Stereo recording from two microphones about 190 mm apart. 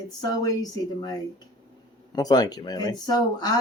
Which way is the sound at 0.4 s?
20° left (ahead or behind).